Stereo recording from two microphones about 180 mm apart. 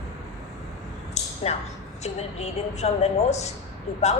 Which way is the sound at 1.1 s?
35° left (ahead or behind).